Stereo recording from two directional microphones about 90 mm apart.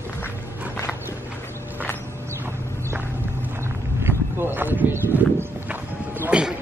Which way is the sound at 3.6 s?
30° right (ahead or behind).